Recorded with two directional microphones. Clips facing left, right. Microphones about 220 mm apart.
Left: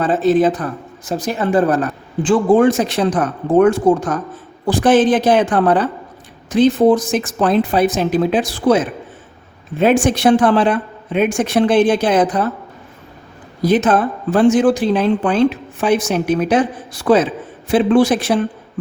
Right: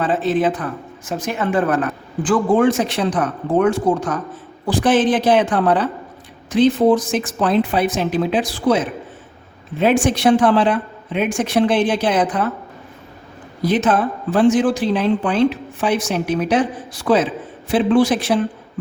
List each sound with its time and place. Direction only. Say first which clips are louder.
0.0 s a woman's voice: left 4 dB; 40° left (ahead or behind)
9.8 s a woman's voice: left 2 dB; 50° left (ahead or behind)
13.6 s a woman's voice: left 3 dB; 45° left (ahead or behind)